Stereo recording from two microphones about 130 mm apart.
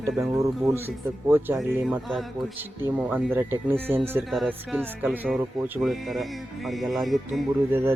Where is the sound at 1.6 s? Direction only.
Centre (ahead or behind).